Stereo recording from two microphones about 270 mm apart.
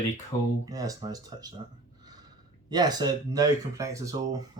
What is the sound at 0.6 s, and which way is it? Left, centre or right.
Speech, centre.